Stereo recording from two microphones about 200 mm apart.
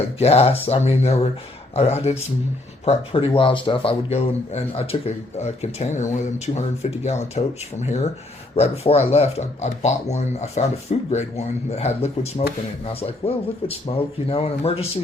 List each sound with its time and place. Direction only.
0.2 s speech: 30° left (ahead or behind)